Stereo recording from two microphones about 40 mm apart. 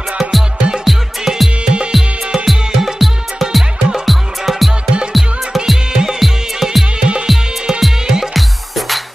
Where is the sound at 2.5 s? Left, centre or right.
Centre.